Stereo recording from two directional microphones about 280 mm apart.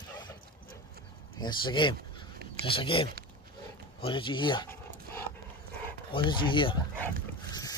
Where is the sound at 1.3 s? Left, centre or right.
Centre.